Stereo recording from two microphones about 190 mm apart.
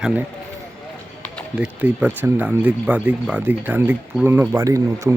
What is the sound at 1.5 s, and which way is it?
Speech, 5° right (ahead or behind).